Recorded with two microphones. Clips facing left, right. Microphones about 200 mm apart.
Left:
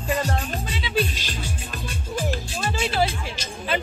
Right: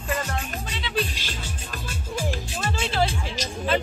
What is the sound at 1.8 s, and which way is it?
Music, 10° right (ahead or behind).